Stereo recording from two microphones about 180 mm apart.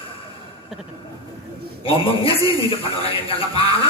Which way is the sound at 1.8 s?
30° left (ahead or behind).